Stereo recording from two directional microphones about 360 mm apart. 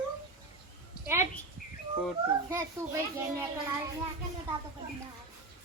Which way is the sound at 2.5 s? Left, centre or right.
Centre.